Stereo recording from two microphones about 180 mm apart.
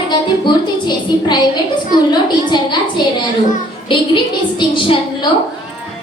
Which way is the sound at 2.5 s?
25° left (ahead or behind).